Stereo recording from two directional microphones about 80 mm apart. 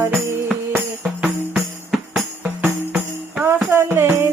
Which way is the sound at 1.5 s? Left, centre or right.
Centre.